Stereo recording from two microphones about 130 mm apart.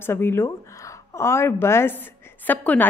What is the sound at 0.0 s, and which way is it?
A woman's voice, 15° left (ahead or behind).